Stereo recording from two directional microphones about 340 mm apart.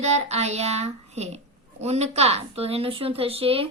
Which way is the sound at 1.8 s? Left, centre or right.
Centre.